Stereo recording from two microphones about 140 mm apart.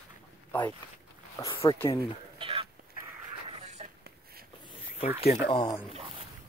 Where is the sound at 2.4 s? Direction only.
40° right (ahead or behind).